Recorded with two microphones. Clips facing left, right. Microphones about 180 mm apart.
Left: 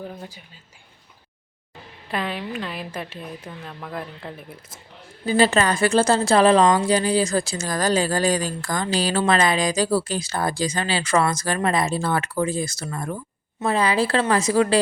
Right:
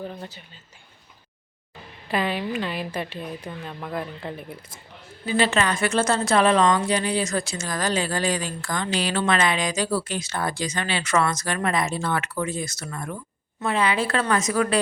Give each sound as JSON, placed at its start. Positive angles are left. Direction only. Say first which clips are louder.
{"t": 0.0, "sound": "speech", "louder": "right 1 dB", "side_deg": 5}
{"t": 2.0, "sound": "a woman's voice", "louder": "right 2 dB", "side_deg": -5}
{"t": 5.2, "sound": "a woman's voice", "louder": "left 4 dB", "side_deg": 35}